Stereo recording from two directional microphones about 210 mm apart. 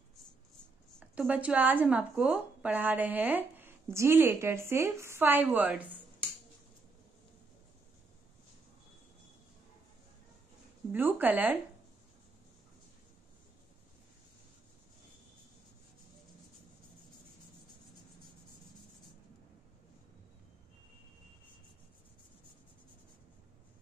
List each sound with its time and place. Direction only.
0.9 s a woman's voice: 5° right (ahead or behind)
10.9 s a woman's voice: 10° right (ahead or behind)